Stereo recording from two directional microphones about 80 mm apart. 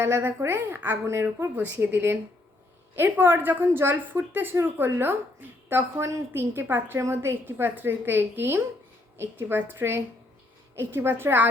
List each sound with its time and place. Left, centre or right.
0.0 s a woman's voice: right